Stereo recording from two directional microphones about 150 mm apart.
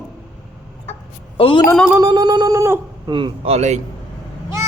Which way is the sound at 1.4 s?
35° left (ahead or behind).